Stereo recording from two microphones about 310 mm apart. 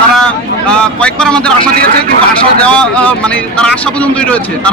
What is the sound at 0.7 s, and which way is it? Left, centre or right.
Speech, centre.